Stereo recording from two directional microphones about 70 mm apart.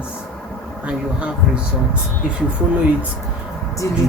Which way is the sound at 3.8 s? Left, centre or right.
Left.